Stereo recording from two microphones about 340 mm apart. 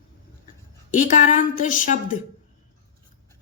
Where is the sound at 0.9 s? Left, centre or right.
Left.